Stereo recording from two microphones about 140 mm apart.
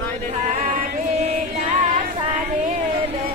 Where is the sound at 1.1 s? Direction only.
55° right (ahead or behind).